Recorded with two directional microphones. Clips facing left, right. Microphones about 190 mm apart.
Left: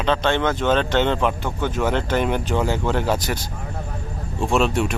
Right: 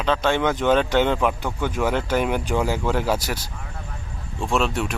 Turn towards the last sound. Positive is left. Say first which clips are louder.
# left 3 dB
turn(degrees=0)  # may be behind; listen again after turning